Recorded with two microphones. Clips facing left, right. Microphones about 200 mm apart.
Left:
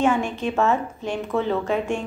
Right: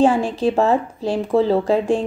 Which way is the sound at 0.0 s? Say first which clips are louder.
Right 5 dB; 35° right (ahead or behind).